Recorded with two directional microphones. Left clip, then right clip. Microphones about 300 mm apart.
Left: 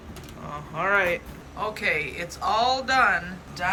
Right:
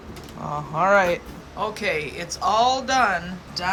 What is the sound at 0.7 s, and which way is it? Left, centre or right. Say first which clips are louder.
Speech: right 5 dB; centre.